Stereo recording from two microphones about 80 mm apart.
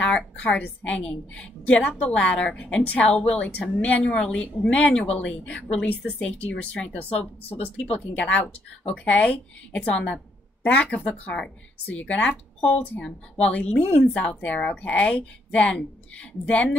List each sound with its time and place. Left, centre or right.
0.0 s a woman's voice: centre